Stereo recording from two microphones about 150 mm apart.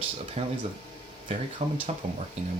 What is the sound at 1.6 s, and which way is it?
Speech, 45° right (ahead or behind).